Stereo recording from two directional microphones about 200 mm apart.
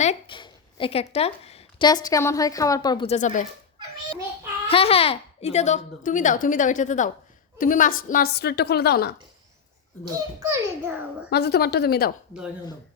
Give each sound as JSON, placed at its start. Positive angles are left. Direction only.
{"t": 0.0, "sound": "a sound", "side_deg": 30}
{"t": 1.1, "sound": "a woman's voice", "side_deg": 30}
{"t": 3.1, "sound": "a child's voice", "side_deg": 40}
{"t": 4.7, "sound": "a child's voice", "side_deg": 30}
{"t": 10.0, "sound": "a child's voice", "side_deg": -15}
{"t": 11.3, "sound": "a woman's voice", "side_deg": 55}